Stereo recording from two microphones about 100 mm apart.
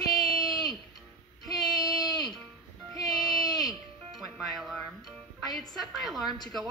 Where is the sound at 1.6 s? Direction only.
45° left (ahead or behind).